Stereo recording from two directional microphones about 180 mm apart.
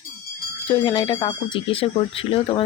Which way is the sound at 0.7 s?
30° left (ahead or behind).